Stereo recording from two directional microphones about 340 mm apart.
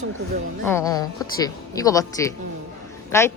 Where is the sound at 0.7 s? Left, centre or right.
Centre.